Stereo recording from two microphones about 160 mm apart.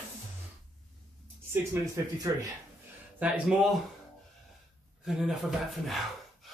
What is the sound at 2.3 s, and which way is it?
Speech, 20° right (ahead or behind).